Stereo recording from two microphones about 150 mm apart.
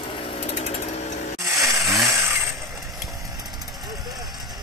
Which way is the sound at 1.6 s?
20° right (ahead or behind).